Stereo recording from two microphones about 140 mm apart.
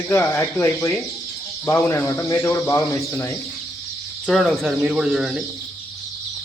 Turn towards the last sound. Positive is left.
turn(degrees=-5)  # may be behind; listen again after turning